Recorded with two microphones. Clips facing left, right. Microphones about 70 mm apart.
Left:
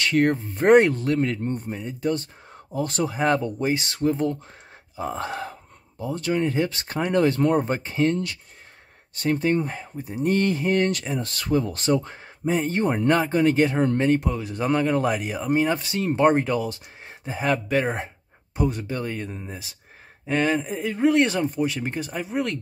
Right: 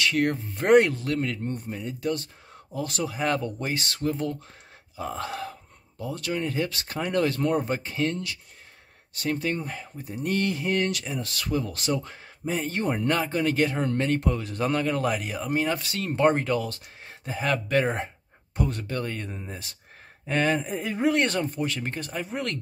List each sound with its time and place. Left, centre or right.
0.0 s speech: left
14.1 s speech: centre
17.6 s speech: centre